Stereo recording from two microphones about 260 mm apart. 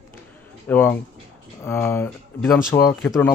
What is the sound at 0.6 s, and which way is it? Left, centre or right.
Speech, centre.